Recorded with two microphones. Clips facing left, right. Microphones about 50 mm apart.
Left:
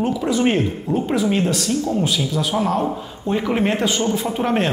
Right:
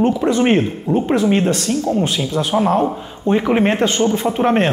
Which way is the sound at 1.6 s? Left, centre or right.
Right.